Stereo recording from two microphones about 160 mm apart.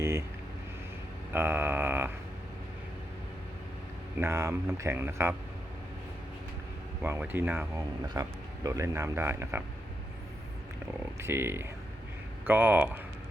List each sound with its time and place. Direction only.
0.0 s vehicle: 15° right (ahead or behind)
1.3 s speech: 15° right (ahead or behind)
4.2 s speech: 15° right (ahead or behind)
7.0 s speech: 15° right (ahead or behind)
11.2 s speech: 15° right (ahead or behind)